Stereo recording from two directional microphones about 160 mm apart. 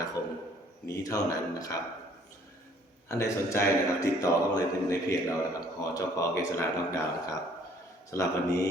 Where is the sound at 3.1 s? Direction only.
15° left (ahead or behind).